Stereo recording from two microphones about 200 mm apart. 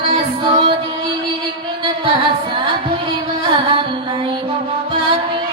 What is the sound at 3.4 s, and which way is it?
Music, 25° right (ahead or behind).